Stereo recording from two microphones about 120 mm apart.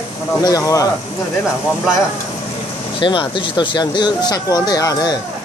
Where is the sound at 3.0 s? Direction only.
45° left (ahead or behind).